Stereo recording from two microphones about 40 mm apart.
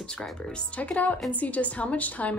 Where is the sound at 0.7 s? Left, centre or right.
Left.